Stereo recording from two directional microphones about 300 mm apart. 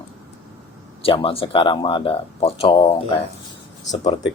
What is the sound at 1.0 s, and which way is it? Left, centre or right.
Speech, centre.